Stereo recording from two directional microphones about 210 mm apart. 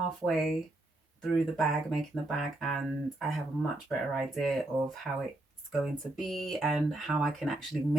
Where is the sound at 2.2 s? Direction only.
Centre (ahead or behind).